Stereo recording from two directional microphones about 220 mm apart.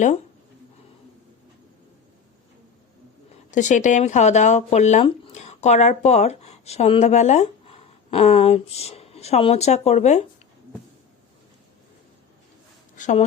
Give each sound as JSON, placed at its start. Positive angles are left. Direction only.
{"t": 3.5, "sound": "speech", "side_deg": 35}
{"t": 13.0, "sound": "speech", "side_deg": 35}